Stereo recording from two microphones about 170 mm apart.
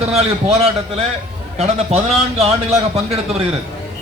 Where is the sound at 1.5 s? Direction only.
40° right (ahead or behind).